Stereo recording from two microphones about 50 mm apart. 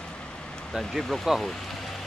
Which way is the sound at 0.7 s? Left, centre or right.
Centre.